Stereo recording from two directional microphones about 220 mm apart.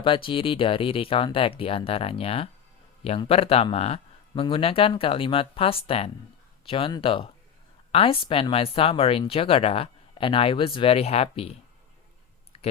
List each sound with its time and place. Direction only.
0.0 s speech: 25° left (ahead or behind)